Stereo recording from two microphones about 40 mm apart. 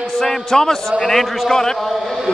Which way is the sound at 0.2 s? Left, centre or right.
Centre.